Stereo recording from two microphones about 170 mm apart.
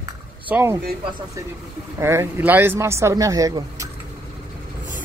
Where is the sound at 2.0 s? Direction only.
15° right (ahead or behind).